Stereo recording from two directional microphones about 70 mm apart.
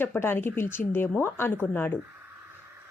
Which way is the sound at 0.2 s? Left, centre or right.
Left.